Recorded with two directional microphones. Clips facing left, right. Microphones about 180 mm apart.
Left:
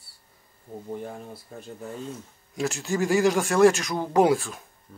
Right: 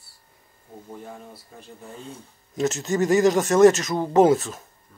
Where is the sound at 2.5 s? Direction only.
Centre (ahead or behind).